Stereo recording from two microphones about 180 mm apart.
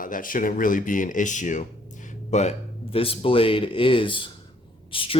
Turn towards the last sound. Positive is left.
turn(degrees=30)  # may be behind; listen again after turning